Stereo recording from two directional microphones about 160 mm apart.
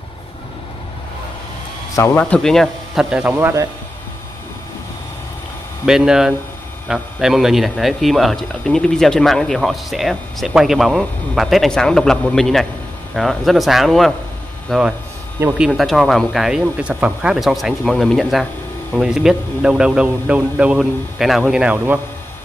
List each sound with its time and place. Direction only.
2.0 s speech: 15° left (ahead or behind); by 3.3 s 5° right (ahead or behind)
3.3 s speech: 15° right (ahead or behind)
5.9 s speech: 5° right (ahead or behind)